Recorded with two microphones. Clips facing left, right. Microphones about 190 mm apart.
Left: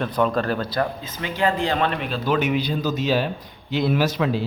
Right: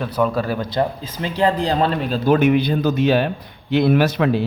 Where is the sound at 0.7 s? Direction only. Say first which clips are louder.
Right 3 dB; 25° right (ahead or behind).